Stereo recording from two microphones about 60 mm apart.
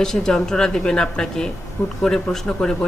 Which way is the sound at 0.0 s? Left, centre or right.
Centre.